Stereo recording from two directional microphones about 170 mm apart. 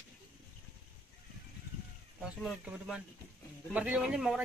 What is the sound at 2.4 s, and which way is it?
Speech, centre (ahead or behind).